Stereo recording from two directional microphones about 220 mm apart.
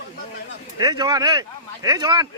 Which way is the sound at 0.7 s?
20° right (ahead or behind).